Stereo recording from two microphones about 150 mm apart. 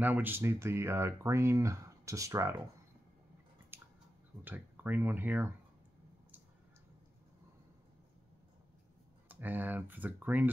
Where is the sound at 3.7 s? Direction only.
15° right (ahead or behind).